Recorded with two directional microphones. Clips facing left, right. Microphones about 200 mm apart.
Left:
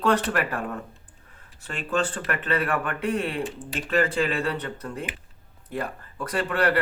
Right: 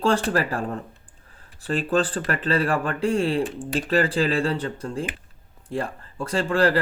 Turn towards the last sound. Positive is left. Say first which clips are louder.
# right 3 dB
turn(degrees=-30)  # may be behind; listen again after turning